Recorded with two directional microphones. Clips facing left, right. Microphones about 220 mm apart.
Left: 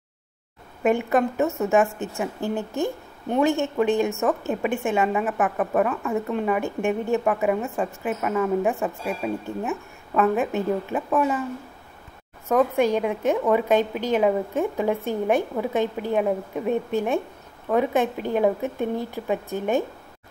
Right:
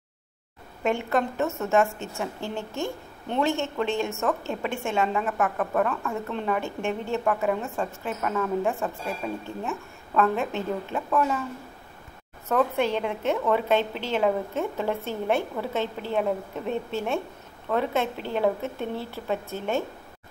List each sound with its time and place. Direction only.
0.8 s a woman's voice: 15° left (ahead or behind)
12.4 s a woman's voice: 10° left (ahead or behind)